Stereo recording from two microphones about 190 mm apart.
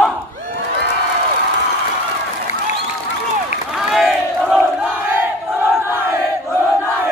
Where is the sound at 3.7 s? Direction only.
Centre (ahead or behind).